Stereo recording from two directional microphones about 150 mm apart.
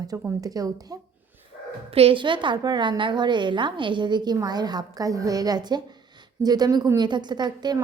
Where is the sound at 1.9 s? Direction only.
40° right (ahead or behind).